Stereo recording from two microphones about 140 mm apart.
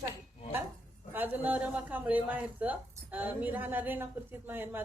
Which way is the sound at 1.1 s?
15° right (ahead or behind).